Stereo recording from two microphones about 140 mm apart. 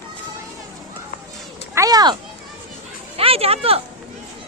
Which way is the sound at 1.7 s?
25° right (ahead or behind).